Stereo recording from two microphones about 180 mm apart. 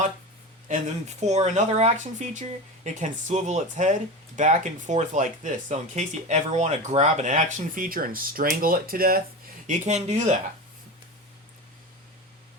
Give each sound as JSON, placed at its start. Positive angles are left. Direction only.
{"t": 0.7, "sound": "speech", "side_deg": -40}
{"t": 9.6, "sound": "speech", "side_deg": -40}